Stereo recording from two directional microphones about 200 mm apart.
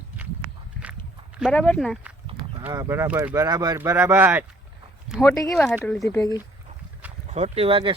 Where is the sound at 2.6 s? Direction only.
15° right (ahead or behind).